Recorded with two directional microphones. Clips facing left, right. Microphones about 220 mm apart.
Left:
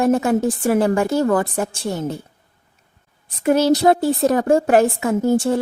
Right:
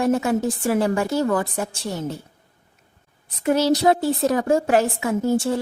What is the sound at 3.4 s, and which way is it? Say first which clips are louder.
A woman's voice: left 3 dB; 55° left (ahead or behind).